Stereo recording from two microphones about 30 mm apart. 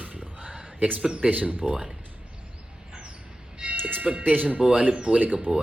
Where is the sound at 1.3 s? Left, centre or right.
Right.